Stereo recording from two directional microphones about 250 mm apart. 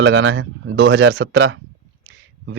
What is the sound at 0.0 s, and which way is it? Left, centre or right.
Speech, right.